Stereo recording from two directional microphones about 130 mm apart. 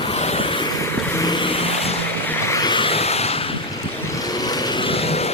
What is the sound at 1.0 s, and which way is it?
Vehicle, 20° left (ahead or behind).